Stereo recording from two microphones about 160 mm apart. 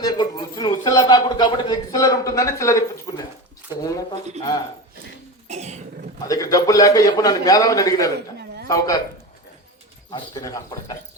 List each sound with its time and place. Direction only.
0.0 s a sound: 25° left (ahead or behind)
5.5 s cough: 45° right (ahead or behind)
6.2 s a man's voice: 20° left (ahead or behind)
10.1 s speech: 25° left (ahead or behind)